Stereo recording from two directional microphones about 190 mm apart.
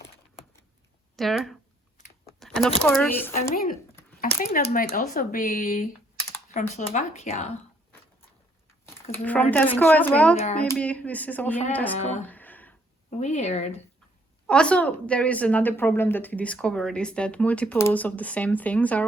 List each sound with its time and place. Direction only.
1.1 s speech: centre (ahead or behind)
2.0 s a sound: 40° left (ahead or behind)
2.8 s speech: 5° left (ahead or behind)
3.5 s speech: 50° left (ahead or behind)
9.1 s speech: 10° left (ahead or behind)
11.9 s speech: 35° left (ahead or behind)
12.3 s a sound: 10° left (ahead or behind)
13.1 s speech: 35° left (ahead or behind)
14.4 s speech: 5° left (ahead or behind)